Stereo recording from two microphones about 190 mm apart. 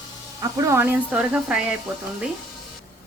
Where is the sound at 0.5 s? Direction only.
15° right (ahead or behind).